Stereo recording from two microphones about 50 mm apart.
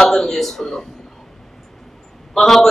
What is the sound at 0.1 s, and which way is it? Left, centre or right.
Speech, centre.